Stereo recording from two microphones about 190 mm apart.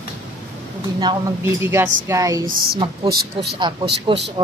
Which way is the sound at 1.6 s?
15° right (ahead or behind).